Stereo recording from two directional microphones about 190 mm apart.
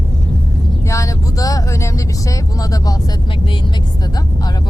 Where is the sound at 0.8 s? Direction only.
15° left (ahead or behind).